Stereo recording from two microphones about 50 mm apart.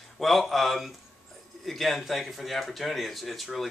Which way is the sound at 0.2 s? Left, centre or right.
Centre.